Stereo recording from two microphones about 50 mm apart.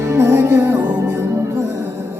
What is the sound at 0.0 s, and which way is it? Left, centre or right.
Music, right.